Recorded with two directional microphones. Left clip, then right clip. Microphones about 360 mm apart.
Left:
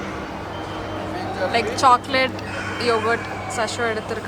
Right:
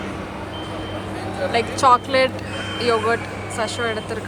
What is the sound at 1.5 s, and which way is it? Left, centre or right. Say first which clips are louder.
Speech: right 1 dB; centre.